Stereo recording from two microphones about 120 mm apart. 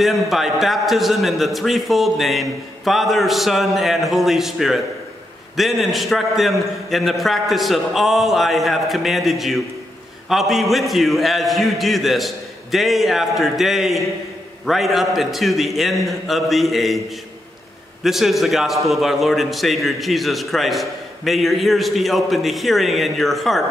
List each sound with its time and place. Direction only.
0.0 s a man's voice: centre (ahead or behind)
18.0 s a man's voice: centre (ahead or behind)